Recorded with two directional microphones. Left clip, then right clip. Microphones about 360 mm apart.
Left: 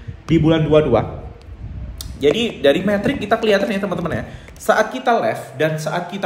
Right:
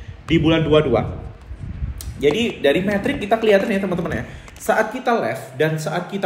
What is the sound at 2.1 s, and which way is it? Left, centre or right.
Speech, left.